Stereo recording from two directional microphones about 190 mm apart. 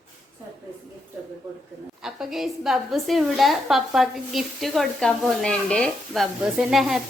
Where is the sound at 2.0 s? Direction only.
Centre (ahead or behind).